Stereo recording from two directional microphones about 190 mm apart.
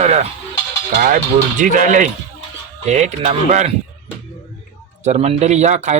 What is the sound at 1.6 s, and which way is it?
Speech, 40° right (ahead or behind).